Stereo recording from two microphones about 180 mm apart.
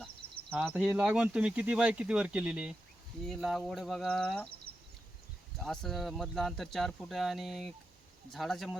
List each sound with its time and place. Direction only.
0.5 s speech: 10° right (ahead or behind)
4.7 s a sound: 30° right (ahead or behind)
5.5 s speech: centre (ahead or behind)